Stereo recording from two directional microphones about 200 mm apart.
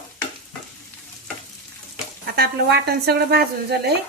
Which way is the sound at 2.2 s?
50° right (ahead or behind).